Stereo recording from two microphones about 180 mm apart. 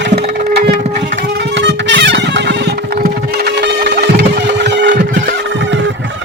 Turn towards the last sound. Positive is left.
turn(degrees=-75)  # may be behind; listen again after turning